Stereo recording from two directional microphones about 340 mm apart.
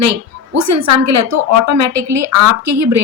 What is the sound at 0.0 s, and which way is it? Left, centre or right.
A woman's voice, right.